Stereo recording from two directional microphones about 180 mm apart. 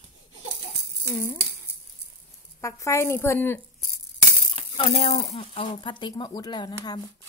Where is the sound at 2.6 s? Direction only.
15° left (ahead or behind).